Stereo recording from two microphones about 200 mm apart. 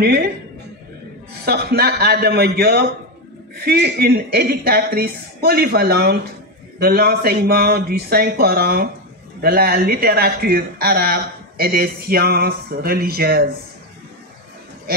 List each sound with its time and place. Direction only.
1.4 s speech: 55° right (ahead or behind)